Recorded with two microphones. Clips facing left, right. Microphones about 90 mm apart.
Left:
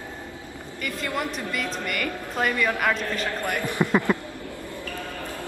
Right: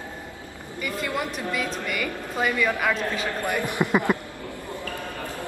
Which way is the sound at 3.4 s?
15° right (ahead or behind).